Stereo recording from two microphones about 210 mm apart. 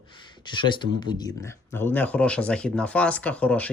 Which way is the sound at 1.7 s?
10° left (ahead or behind).